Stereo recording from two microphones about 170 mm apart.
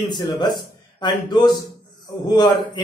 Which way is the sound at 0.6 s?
25° left (ahead or behind).